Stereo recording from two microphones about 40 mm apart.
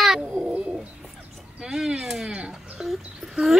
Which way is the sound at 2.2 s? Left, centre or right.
Centre.